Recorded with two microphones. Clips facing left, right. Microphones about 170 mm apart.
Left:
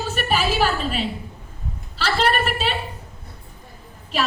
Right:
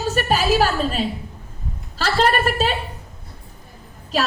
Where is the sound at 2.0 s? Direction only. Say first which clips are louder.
Right 2 dB; 45° right (ahead or behind).